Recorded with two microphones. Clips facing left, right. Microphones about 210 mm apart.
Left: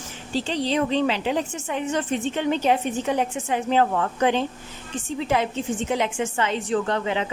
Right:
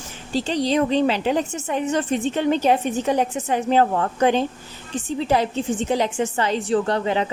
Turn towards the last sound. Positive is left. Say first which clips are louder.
# right 3 dB
turn(degrees=-35)  # may be behind; listen again after turning